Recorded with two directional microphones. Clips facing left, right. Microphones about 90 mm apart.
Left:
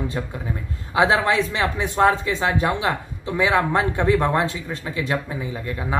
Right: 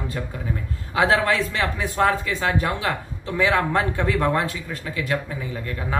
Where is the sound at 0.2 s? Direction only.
25° left (ahead or behind).